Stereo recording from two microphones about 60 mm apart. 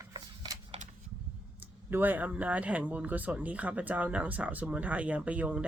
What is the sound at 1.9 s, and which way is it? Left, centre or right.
Speech, right.